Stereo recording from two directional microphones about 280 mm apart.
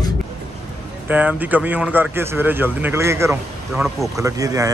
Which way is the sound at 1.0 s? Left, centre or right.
Centre.